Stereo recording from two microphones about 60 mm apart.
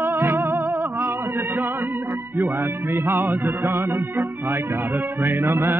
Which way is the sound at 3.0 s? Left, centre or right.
Right.